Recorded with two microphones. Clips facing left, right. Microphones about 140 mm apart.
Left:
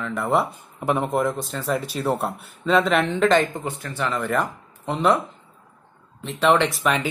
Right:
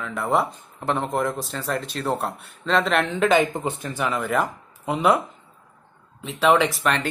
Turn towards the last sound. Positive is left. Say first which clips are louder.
# even
turn(degrees=0)  # may be behind; listen again after turning